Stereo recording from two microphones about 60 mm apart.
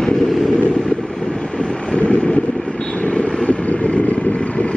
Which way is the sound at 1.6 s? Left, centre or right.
Centre.